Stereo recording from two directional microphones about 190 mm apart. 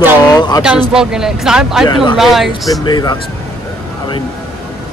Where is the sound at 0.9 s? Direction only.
Centre (ahead or behind).